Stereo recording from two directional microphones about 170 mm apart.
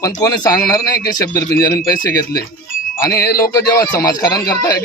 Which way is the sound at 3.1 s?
65° left (ahead or behind).